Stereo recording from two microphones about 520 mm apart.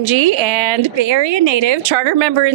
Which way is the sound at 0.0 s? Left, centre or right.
Right.